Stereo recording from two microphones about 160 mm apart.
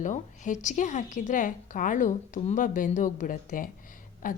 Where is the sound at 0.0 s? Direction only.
50° left (ahead or behind).